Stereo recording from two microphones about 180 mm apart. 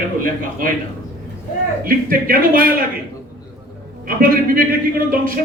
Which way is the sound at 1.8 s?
50° right (ahead or behind).